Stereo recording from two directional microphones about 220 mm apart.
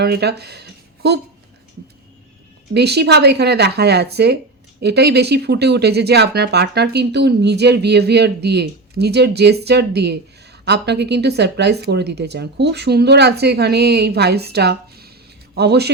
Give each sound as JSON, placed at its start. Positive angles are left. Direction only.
{"t": 0.0, "sound": "speech", "side_deg": -50}
{"t": 2.7, "sound": "speech", "side_deg": -50}